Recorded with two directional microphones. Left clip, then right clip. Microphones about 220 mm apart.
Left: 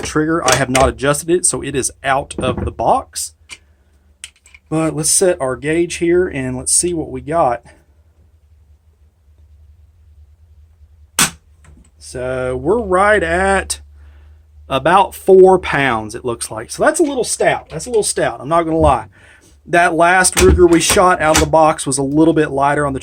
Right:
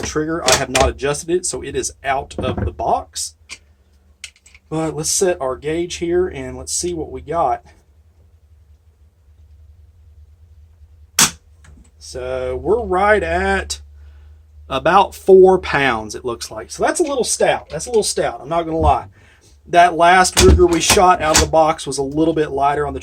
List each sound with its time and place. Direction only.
0.0 s speech: 35° left (ahead or behind)
4.7 s speech: 45° left (ahead or behind)
11.9 s speech: 45° left (ahead or behind)
14.7 s speech: 20° left (ahead or behind)
16.6 s speech: 45° left (ahead or behind)